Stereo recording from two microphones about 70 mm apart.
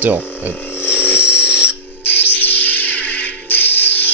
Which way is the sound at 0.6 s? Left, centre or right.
Left.